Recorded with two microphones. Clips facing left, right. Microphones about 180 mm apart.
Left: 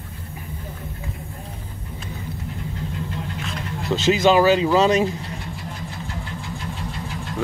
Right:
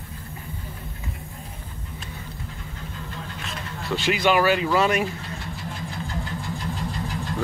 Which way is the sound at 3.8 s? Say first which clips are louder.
Left 5 dB; 20° left (ahead or behind).